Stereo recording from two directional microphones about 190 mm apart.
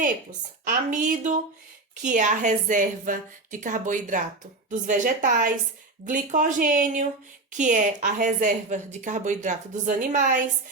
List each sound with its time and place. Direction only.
0.0 s a woman's voice: 45° right (ahead or behind)